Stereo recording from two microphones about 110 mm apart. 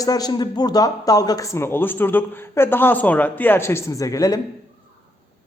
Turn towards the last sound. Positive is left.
turn(degrees=30)  # may be behind; listen again after turning